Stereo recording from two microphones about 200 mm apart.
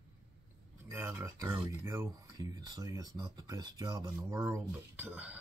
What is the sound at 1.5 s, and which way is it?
Speech, 15° right (ahead or behind).